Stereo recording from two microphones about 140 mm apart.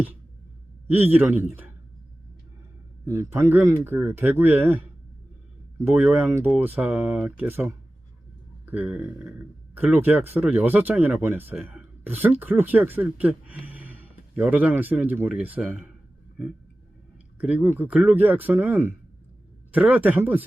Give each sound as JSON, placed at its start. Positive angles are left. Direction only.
{"t": 0.9, "sound": "speech", "side_deg": -15}
{"t": 3.1, "sound": "a man's voice", "side_deg": -20}
{"t": 5.9, "sound": "speech", "side_deg": -10}
{"t": 17.3, "sound": "speech", "side_deg": -10}